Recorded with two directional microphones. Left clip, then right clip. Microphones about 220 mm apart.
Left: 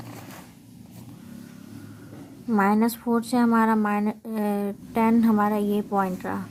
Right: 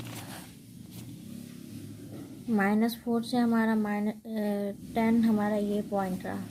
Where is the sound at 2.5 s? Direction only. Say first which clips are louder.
Left 6 dB; 20° left (ahead or behind).